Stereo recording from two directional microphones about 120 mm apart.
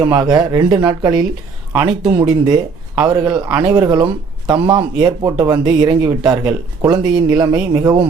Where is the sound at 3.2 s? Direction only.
10° right (ahead or behind).